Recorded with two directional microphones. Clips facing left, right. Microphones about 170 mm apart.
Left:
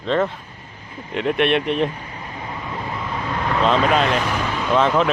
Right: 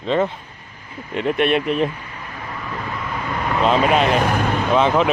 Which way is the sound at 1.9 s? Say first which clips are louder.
Left 1 dB; 35° left (ahead or behind).